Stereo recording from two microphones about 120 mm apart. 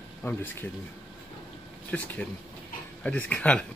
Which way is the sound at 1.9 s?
10° left (ahead or behind).